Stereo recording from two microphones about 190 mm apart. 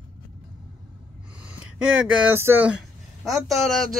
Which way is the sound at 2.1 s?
10° right (ahead or behind).